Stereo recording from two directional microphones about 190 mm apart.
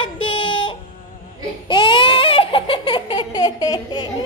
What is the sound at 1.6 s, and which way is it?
Baby cry, 25° left (ahead or behind).